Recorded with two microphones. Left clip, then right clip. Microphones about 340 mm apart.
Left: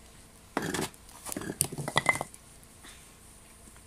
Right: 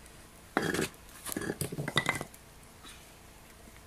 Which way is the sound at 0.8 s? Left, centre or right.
Centre.